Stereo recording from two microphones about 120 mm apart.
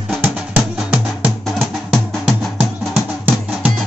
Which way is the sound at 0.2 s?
15° right (ahead or behind).